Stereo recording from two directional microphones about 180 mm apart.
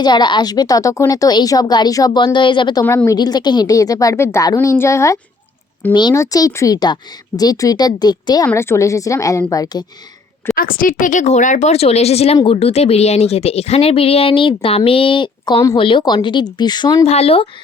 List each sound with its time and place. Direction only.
0.0 s a woman's voice: 25° left (ahead or behind)
2.8 s a woman's voice: 15° left (ahead or behind)
10.5 s speech: 50° left (ahead or behind); by 17.1 s 25° left (ahead or behind)
17.1 s speech: 35° left (ahead or behind)